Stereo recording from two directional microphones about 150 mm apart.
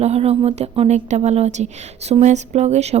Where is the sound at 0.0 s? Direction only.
45° right (ahead or behind).